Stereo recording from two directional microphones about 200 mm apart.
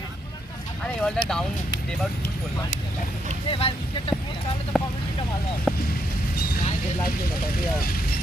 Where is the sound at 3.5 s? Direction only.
25° left (ahead or behind).